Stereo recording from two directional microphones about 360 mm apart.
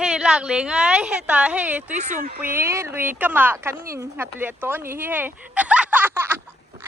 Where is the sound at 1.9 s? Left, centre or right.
Right.